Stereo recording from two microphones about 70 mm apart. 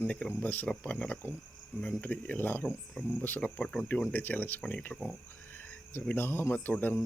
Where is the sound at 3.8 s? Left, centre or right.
Left.